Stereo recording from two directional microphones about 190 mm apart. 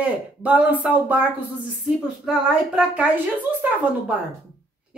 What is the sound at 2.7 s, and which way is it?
A woman's voice, 10° right (ahead or behind).